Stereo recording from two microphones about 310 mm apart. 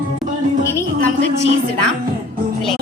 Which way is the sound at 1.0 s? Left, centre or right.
Right.